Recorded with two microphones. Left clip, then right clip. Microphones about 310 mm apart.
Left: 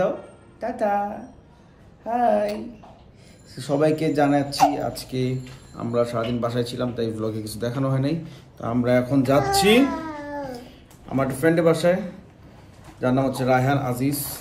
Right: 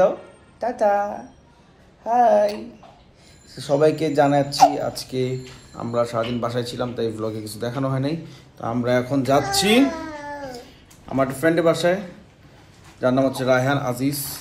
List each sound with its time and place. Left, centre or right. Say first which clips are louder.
0.6 s speech: right 4 dB; centre
2.0 s speech: right 5 dB; centre
3.5 s speech: right 3 dB; centre
10.0 s a sound: even; centre
10.5 s a sound: even; centre
13.0 s speech: right 3 dB; centre